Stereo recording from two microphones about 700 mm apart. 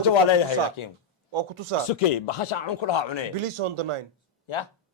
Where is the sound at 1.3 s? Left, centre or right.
Right.